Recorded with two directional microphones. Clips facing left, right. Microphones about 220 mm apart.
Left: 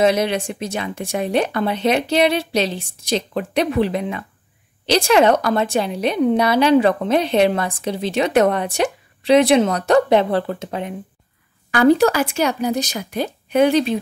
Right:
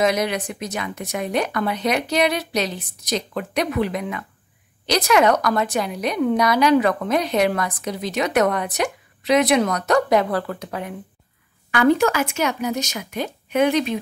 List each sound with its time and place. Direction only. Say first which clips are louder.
0.0 s a woman's voice: left 3 dB; 30° left (ahead or behind)
11.7 s speech: left 3 dB; 35° left (ahead or behind)